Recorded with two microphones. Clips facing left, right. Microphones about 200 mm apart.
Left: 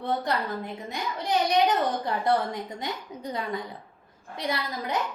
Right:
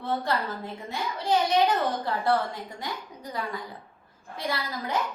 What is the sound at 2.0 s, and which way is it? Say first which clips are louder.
A woman's voice: left 1 dB; 20° left (ahead or behind).